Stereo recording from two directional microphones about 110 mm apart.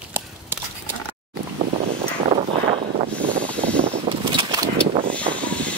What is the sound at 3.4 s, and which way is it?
Vehicle, 10° left (ahead or behind).